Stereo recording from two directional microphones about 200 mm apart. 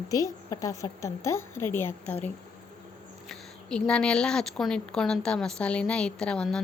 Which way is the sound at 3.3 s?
5° left (ahead or behind).